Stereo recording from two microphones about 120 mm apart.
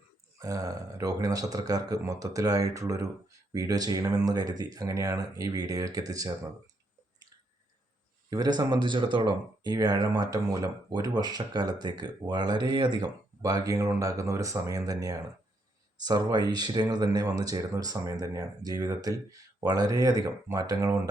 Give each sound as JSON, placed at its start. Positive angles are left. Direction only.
{"t": 0.3, "sound": "speech", "side_deg": -30}
{"t": 8.3, "sound": "speech", "side_deg": -35}